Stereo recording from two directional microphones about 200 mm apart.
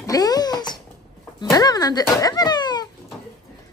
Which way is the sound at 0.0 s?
20° left (ahead or behind).